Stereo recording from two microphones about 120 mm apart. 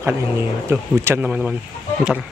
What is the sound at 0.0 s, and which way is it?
Speech, 20° right (ahead or behind).